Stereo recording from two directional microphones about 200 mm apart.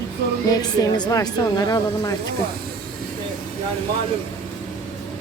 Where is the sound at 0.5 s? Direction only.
20° left (ahead or behind).